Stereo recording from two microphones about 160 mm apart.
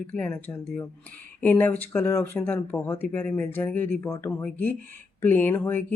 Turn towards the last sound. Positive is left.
turn(degrees=15)  # may be behind; listen again after turning